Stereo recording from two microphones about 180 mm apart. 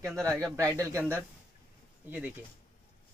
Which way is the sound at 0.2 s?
5° left (ahead or behind).